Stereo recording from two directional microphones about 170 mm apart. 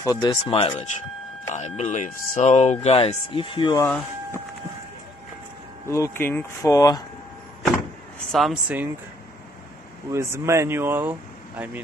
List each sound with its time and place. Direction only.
0.0 s speech: 20° left (ahead or behind)
0.5 s speech: 35° left (ahead or behind)
5.9 s speech: 15° left (ahead or behind)
8.3 s speech: centre (ahead or behind)
10.1 s speech: 15° right (ahead or behind)